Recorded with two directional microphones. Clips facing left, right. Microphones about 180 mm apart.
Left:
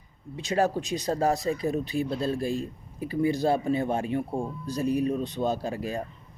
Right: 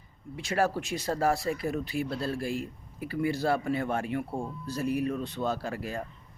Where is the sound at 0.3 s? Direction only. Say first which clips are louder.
Left 3 dB; 20° left (ahead or behind).